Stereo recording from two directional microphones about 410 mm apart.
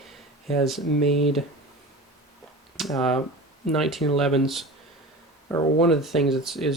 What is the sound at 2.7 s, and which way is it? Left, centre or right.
Speech, centre.